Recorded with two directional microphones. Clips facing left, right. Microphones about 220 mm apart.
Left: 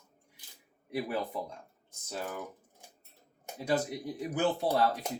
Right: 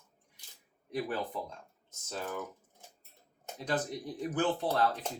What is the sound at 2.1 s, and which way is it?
Speech, 10° left (ahead or behind).